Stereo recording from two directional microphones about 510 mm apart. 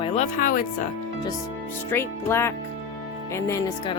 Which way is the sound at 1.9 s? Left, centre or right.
Centre.